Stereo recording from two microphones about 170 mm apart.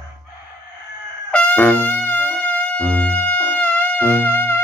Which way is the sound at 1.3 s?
10° left (ahead or behind).